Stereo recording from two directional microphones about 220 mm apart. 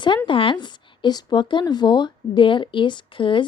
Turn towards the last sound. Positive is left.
turn(degrees=20)  # may be behind; listen again after turning